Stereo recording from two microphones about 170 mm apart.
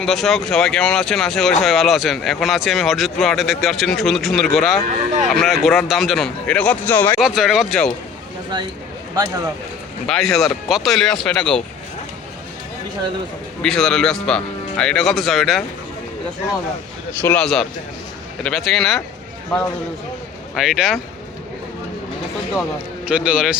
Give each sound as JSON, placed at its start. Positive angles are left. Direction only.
{"t": 0.0, "sound": "speech", "side_deg": 0}
{"t": 7.2, "sound": "speech", "side_deg": 0}
{"t": 9.1, "sound": "speech", "side_deg": -20}
{"t": 10.1, "sound": "speech", "side_deg": 0}
{"t": 13.6, "sound": "speech", "side_deg": 5}
{"t": 17.2, "sound": "speech", "side_deg": 10}
{"t": 20.6, "sound": "speech", "side_deg": 0}
{"t": 23.0, "sound": "a man's voice", "side_deg": -5}